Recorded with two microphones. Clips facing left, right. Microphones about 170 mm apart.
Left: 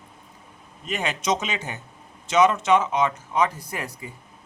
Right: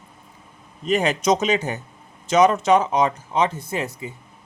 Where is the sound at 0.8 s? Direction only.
40° right (ahead or behind).